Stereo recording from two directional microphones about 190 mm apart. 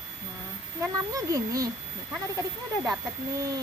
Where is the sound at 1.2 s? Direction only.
15° right (ahead or behind).